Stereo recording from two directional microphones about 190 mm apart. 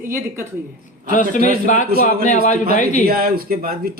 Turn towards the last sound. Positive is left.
turn(degrees=-50)  # may be behind; listen again after turning